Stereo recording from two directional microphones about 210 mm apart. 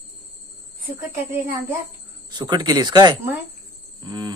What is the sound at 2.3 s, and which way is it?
Speech, 20° right (ahead or behind).